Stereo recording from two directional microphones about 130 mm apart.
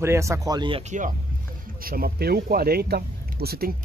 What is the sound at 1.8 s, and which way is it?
Speech, 90° right.